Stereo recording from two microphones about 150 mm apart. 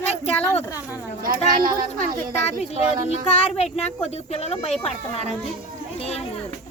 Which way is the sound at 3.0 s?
45° left (ahead or behind).